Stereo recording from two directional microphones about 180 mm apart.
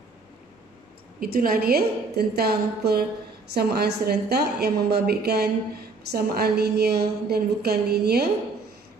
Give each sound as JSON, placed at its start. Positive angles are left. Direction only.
{"t": 1.2, "sound": "a woman's voice", "side_deg": -55}